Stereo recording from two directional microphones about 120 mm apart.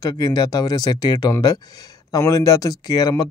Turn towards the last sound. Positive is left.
turn(degrees=30)  # may be behind; listen again after turning